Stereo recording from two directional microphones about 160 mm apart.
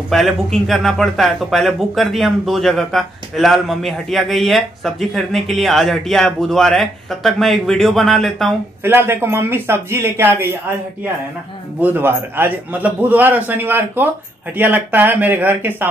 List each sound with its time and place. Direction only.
0.1 s speech: centre (ahead or behind)
8.8 s a man's voice: 15° right (ahead or behind)
11.8 s a man's voice: 15° right (ahead or behind)